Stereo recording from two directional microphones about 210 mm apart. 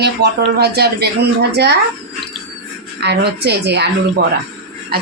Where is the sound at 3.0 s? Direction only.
50° right (ahead or behind).